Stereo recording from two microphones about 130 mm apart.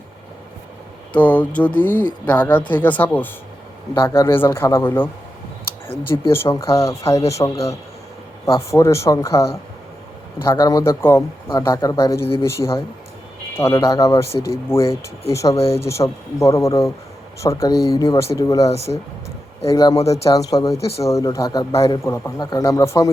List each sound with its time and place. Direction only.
1.1 s speech: 10° left (ahead or behind)
5.9 s speech: 45° left (ahead or behind)
6.3 s speech: 20° left (ahead or behind)
8.7 s speech: 20° left (ahead or behind)
15.5 s speech: 50° left (ahead or behind)
15.9 s speech: 25° left (ahead or behind)
18.7 s speech: 55° left (ahead or behind)
19.6 s a man's voice: 30° left (ahead or behind)